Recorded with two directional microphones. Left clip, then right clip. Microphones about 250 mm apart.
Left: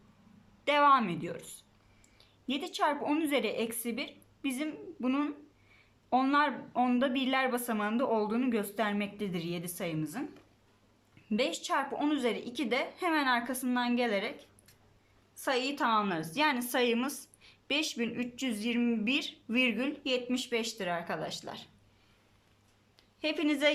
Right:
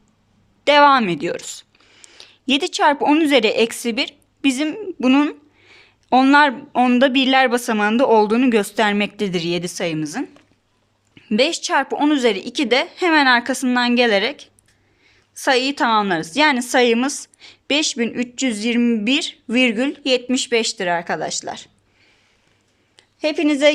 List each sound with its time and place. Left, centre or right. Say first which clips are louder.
0.6 s a woman's voice: right 13 dB; right
11.3 s a woman's voice: right 14 dB; right
23.0 s a woman's voice: right 13 dB; right